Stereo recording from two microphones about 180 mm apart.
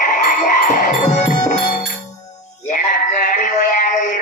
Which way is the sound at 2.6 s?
45° left (ahead or behind).